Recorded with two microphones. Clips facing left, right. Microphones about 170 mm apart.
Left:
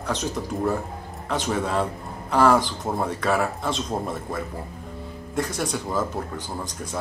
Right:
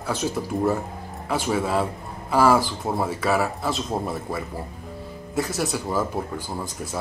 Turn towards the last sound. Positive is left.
turn(degrees=-5)  # may be behind; listen again after turning